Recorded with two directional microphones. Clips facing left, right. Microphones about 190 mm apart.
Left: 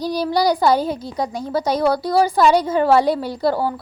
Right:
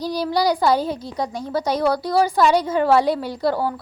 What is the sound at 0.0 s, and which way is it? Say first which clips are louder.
Speech: left 2 dB; 15° left (ahead or behind).